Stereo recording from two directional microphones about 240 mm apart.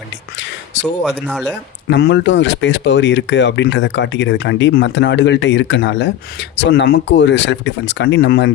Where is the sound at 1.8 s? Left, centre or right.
Left.